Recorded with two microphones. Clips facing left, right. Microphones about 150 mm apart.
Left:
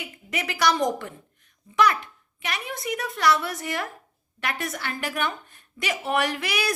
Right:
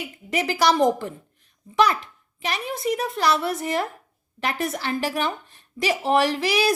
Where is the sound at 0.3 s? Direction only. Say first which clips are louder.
Right 4 dB; 30° right (ahead or behind).